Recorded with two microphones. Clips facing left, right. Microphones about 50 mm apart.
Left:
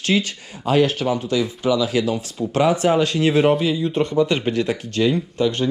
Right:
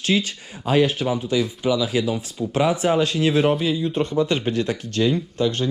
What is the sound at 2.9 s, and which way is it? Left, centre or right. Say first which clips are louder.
Speech: left 2 dB; left.